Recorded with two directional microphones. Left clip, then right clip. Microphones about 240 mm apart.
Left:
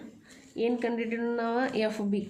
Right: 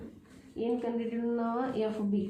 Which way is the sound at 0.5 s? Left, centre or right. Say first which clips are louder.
Left 4 dB; left.